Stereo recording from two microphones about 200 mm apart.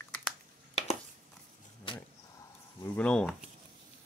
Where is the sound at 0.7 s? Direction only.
30° left (ahead or behind).